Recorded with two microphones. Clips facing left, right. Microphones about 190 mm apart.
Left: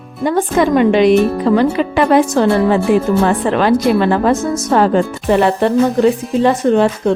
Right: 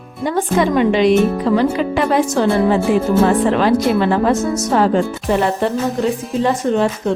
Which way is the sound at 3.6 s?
65° left (ahead or behind).